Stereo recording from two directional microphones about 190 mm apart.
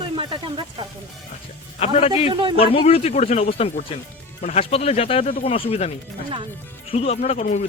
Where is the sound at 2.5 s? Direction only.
30° left (ahead or behind).